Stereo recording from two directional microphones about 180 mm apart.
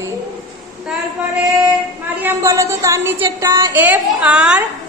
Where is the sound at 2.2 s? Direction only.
15° right (ahead or behind).